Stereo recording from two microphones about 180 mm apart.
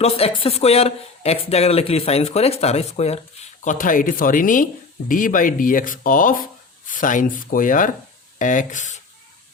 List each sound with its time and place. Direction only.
0.0 s speech: 35° left (ahead or behind)